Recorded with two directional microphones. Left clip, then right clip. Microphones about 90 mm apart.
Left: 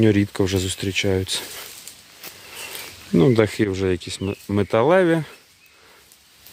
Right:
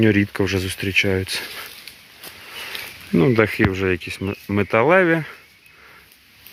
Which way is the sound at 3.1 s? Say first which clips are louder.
Even; 20° left (ahead or behind).